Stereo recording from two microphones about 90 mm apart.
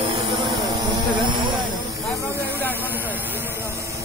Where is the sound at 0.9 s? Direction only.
60° right (ahead or behind).